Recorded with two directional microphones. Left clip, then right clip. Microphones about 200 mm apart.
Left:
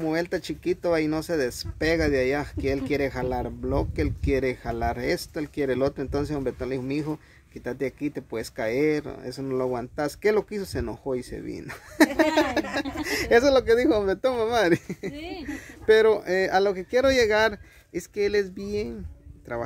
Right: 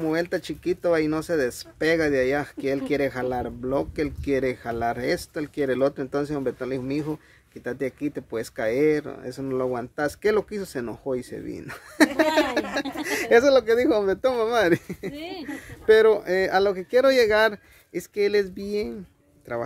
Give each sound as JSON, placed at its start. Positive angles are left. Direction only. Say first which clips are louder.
{"t": 0.0, "sound": "speech", "louder": "right 2 dB", "side_deg": 0}
{"t": 15.1, "sound": "speech", "louder": "right 1 dB", "side_deg": -20}
{"t": 15.4, "sound": "speech", "louder": "right 2 dB", "side_deg": 5}
{"t": 18.1, "sound": "speech", "louder": "right 2 dB", "side_deg": -10}